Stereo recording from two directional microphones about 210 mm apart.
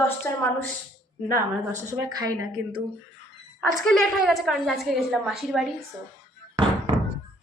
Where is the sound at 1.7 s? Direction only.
15° right (ahead or behind).